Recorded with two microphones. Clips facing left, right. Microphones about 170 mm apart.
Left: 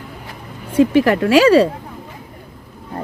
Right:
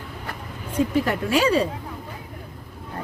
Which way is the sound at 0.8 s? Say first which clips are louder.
Left 9 dB; 85° left.